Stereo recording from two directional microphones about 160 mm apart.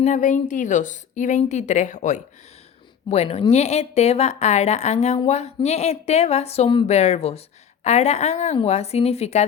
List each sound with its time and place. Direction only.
0.0 s a woman's voice: 50° left (ahead or behind)